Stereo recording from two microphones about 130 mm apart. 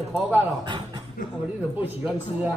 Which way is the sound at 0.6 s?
40° right (ahead or behind).